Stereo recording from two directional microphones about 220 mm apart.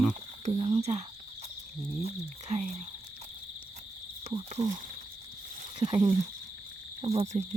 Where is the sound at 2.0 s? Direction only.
30° right (ahead or behind).